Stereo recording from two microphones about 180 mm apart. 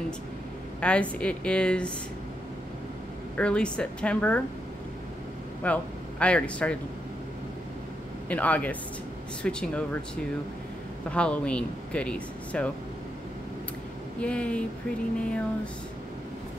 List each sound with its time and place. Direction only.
0.7 s speech: 5° left (ahead or behind)
3.3 s speech: 5° left (ahead or behind)
5.6 s a man's voice: 5° left (ahead or behind)
8.3 s speech: 10° left (ahead or behind)
11.1 s speech: 5° left (ahead or behind)
14.2 s speech: 5° left (ahead or behind)